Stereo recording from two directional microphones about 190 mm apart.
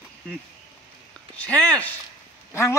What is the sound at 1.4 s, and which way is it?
Speech, 5° left (ahead or behind).